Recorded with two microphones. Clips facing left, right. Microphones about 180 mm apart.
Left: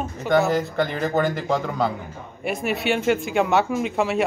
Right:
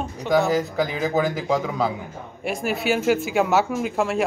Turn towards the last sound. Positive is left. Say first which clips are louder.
# left 1 dB
turn(degrees=0)  # may be behind; listen again after turning